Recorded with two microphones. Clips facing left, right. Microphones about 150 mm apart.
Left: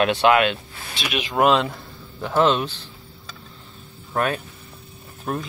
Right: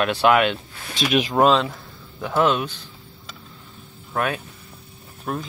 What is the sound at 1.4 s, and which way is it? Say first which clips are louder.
Speech: left 1 dB; 5° left (ahead or behind).